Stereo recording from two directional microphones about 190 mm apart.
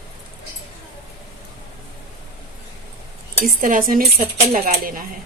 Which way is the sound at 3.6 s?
45° right (ahead or behind).